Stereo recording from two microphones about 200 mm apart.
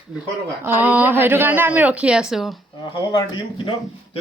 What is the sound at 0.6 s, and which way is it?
A woman's voice, 10° right (ahead or behind).